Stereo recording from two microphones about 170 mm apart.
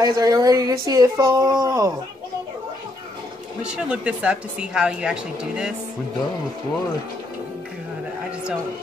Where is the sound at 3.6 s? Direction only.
5° right (ahead or behind).